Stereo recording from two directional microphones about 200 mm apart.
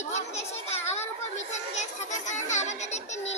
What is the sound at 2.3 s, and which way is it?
Music, 35° left (ahead or behind).